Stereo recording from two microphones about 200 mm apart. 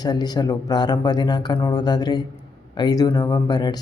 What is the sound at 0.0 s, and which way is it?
Speech, 20° left (ahead or behind).